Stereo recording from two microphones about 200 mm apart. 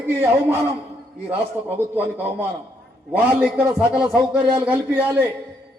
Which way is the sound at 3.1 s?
10° right (ahead or behind).